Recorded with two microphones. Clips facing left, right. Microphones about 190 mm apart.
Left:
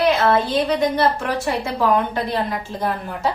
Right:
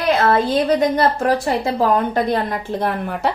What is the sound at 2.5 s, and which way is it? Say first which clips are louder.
Speech: right 3 dB; 60° right (ahead or behind).